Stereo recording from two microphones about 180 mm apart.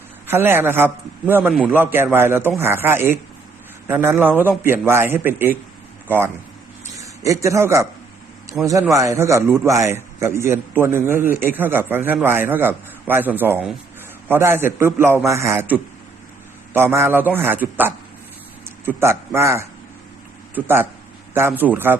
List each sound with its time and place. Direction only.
0.3 s a man's voice: 15° right (ahead or behind)